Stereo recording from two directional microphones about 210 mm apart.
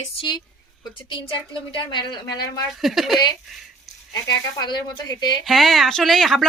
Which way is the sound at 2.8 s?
Centre (ahead or behind).